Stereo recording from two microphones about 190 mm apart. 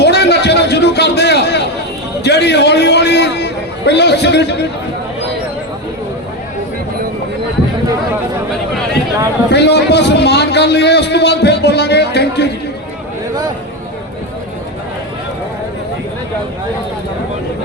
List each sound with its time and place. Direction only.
0.0 s a sound: 60° left (ahead or behind)
2.2 s a man's voice: 65° left (ahead or behind)
9.5 s a man's voice: 60° left (ahead or behind)